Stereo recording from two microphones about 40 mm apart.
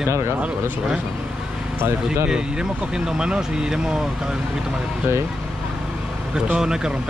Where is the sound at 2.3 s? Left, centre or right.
Centre.